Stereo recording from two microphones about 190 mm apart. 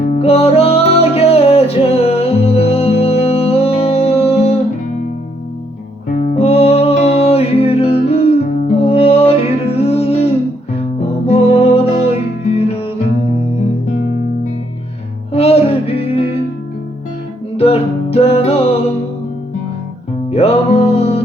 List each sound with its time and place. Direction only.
0.2 s music: 30° left (ahead or behind)
6.3 s music: 35° left (ahead or behind)
11.3 s music: 30° left (ahead or behind)
15.3 s music: 35° left (ahead or behind)
17.6 s music: 30° left (ahead or behind)
20.3 s music: 30° left (ahead or behind)